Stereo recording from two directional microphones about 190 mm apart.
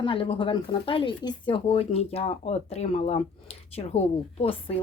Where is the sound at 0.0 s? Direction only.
30° left (ahead or behind).